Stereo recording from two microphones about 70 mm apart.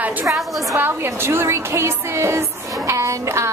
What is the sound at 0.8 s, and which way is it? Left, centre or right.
A woman's voice, right.